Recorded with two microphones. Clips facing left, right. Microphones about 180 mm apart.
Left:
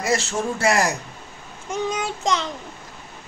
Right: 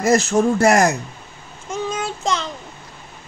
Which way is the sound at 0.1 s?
45° right (ahead or behind).